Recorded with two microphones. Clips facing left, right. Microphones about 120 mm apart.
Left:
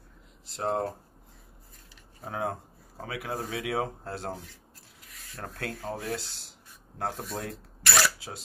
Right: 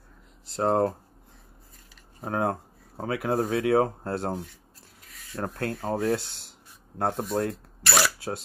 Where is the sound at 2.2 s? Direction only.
55° right (ahead or behind).